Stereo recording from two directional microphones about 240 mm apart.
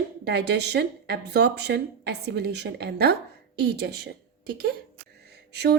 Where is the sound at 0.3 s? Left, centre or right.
Right.